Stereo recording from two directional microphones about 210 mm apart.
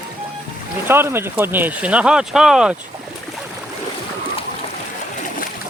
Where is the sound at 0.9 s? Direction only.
10° right (ahead or behind).